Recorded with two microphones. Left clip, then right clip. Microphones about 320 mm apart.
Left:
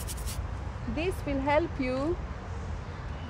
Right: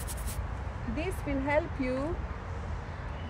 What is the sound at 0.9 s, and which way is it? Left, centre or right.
Speech, centre.